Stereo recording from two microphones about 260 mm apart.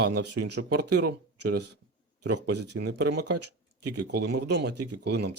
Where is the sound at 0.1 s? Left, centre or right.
Right.